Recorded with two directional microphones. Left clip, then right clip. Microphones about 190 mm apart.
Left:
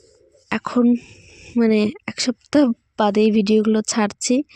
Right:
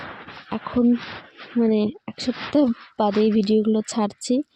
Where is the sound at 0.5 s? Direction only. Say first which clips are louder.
Left 3 dB; 20° left (ahead or behind).